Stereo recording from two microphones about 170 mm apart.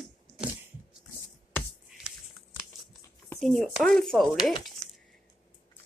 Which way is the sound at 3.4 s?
Centre (ahead or behind).